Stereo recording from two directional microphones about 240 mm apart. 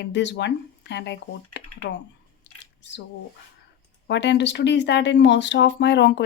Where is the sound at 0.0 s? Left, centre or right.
Left.